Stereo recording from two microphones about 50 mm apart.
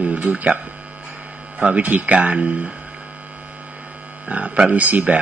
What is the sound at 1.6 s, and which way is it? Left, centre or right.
Speech, right.